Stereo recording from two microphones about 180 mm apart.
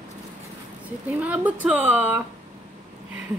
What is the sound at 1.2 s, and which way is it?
Speech, 10° right (ahead or behind).